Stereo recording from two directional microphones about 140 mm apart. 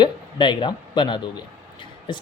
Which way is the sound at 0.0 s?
35° left (ahead or behind).